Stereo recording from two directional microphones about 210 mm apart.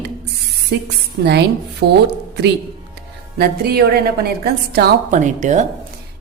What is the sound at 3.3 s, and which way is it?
A woman's voice, 50° right (ahead or behind).